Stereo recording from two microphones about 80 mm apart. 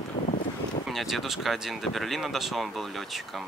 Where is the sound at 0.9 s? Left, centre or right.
Centre.